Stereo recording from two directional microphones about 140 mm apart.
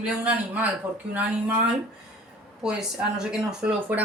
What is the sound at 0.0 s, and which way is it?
Speech, 10° right (ahead or behind).